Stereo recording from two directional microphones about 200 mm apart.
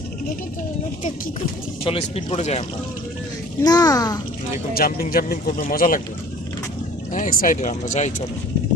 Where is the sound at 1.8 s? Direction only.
30° left (ahead or behind).